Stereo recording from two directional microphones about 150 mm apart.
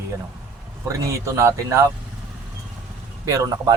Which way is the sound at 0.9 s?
20° right (ahead or behind).